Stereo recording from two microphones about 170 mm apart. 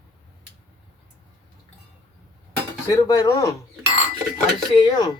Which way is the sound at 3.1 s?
20° left (ahead or behind).